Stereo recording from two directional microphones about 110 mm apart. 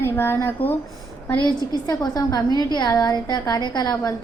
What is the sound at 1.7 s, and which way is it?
A woman's voice, 40° left (ahead or behind).